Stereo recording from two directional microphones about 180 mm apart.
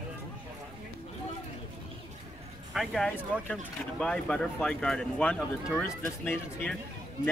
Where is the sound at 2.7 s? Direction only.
Centre (ahead or behind).